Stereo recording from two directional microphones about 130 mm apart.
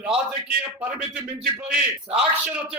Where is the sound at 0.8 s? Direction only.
10° right (ahead or behind).